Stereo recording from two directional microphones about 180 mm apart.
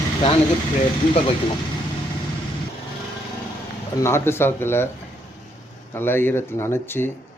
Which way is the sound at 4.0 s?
15° left (ahead or behind).